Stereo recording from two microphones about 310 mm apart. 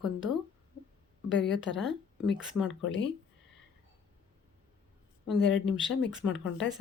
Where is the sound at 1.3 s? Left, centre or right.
Left.